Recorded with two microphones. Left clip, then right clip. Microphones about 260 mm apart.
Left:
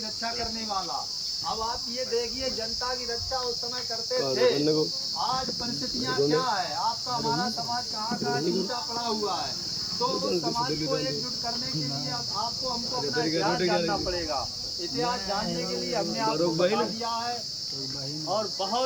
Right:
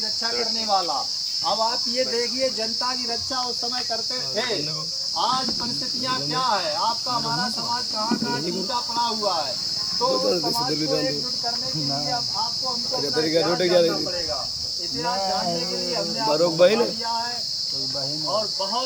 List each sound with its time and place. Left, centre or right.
13.3 s speech: centre
16.3 s speech: centre